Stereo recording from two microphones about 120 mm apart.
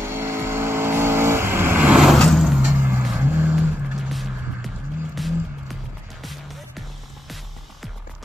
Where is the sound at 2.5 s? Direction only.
10° right (ahead or behind).